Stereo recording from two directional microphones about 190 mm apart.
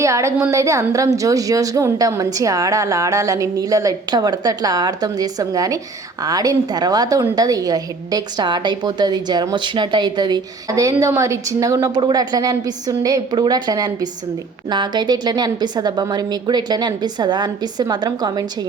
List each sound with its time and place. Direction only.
0.0 s a woman's voice: 15° right (ahead or behind)